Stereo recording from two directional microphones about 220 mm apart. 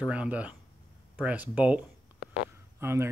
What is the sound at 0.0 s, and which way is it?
Speech, 5° right (ahead or behind).